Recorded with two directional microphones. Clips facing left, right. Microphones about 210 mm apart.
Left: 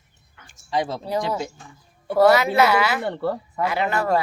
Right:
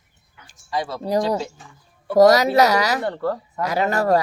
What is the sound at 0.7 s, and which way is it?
Speech, 20° left (ahead or behind).